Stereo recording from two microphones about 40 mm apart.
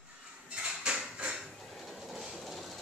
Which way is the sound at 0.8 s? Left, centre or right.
Right.